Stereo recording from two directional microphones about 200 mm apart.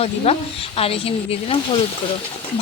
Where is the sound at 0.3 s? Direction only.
30° left (ahead or behind).